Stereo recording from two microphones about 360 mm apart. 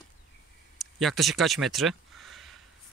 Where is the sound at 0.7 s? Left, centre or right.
Centre.